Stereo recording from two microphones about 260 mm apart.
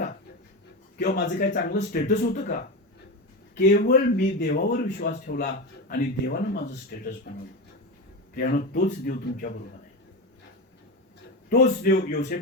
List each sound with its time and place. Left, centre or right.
0.9 s a man's voice: left
11.4 s a man's voice: left